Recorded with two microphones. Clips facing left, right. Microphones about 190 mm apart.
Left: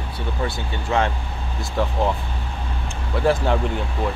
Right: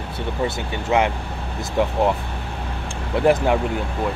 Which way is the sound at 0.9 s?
20° right (ahead or behind).